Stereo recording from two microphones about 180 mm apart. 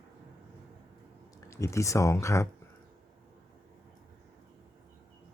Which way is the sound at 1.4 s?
15° left (ahead or behind).